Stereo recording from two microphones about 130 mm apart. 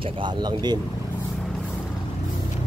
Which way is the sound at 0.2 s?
35° right (ahead or behind).